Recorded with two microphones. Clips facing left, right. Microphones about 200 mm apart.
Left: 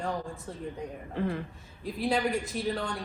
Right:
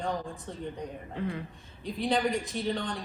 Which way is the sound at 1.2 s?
50° left (ahead or behind).